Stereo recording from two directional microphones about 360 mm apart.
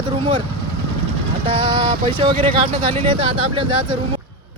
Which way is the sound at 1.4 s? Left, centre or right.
Centre.